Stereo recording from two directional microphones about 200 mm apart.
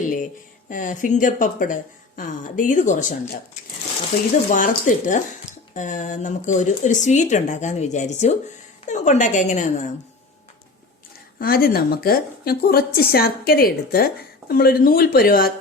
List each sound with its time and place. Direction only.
0.7 s a woman's voice: 40° left (ahead or behind)
11.3 s a woman's voice: 50° left (ahead or behind)